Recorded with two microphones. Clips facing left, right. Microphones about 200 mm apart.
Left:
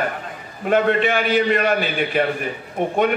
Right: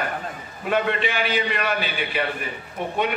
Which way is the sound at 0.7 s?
50° left (ahead or behind).